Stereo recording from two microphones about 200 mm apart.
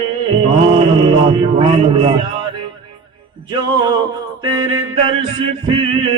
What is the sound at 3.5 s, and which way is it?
Music, 20° right (ahead or behind).